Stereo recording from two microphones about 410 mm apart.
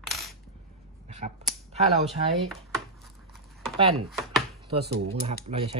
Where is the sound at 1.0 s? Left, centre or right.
Centre.